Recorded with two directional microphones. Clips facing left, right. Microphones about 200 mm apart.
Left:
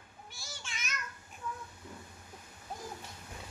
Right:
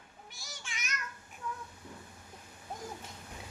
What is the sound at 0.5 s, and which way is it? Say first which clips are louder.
Child singing: even; 15° right (ahead or behind).